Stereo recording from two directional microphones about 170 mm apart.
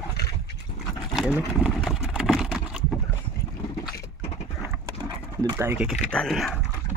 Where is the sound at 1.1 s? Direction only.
Centre (ahead or behind).